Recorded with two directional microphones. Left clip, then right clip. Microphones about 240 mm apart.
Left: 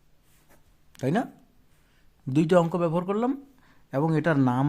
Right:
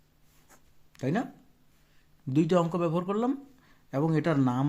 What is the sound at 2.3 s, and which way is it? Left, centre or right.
Speech, left.